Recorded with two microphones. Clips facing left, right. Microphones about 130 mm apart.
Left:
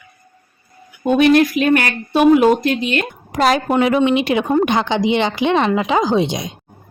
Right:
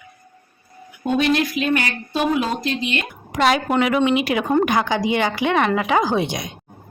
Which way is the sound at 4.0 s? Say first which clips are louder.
Left 3 dB; 25° left (ahead or behind).